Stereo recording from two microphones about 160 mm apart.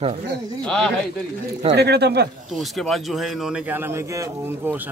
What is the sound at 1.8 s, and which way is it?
Speech, 90° right.